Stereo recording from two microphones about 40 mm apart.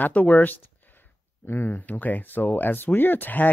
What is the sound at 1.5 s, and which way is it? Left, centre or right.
Speech, left.